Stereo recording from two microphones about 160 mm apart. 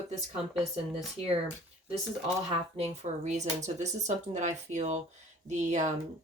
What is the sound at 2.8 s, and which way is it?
Speech, 45° right (ahead or behind).